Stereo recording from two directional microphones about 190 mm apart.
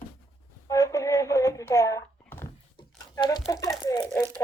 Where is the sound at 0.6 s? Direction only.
15° left (ahead or behind).